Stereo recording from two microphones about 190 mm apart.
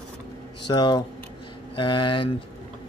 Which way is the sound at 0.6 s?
25° left (ahead or behind).